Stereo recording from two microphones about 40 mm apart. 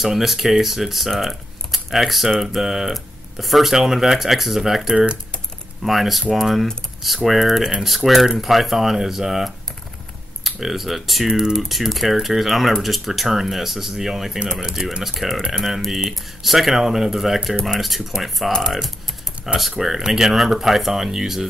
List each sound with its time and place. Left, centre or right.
0.0 s speech: centre
4.9 s speech: right
5.9 s speech: centre
11.3 s speech: centre
11.7 s speech: centre